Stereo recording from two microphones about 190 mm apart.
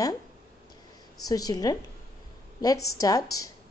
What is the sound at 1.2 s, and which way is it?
A woman's voice, 20° left (ahead or behind).